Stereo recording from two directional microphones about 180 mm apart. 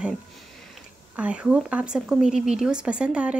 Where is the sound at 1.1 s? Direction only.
5° right (ahead or behind).